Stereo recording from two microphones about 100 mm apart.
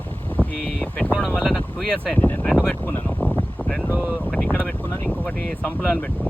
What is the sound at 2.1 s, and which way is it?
Speech, 10° left (ahead or behind).